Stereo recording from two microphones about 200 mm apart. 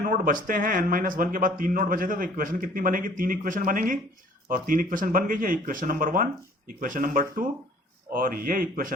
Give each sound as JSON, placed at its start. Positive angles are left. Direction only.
{"t": 0.0, "sound": "speech", "side_deg": -45}